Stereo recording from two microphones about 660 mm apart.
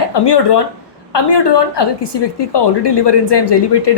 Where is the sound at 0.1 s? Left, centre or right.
Left.